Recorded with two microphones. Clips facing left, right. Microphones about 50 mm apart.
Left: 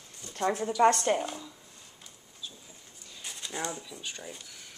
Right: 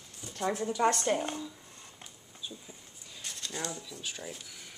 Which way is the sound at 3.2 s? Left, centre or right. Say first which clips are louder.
Left 2 dB; centre.